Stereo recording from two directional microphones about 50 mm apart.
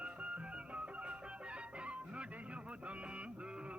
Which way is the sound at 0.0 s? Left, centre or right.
Right.